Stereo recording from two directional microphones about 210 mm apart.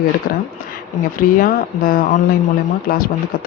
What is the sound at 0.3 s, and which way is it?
Speech, 40° left (ahead or behind).